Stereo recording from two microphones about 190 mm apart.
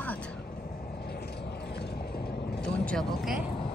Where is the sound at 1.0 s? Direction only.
60° left (ahead or behind).